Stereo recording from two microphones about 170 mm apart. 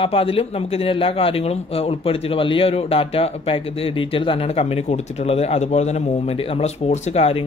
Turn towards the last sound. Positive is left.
turn(degrees=35)  # may be behind; listen again after turning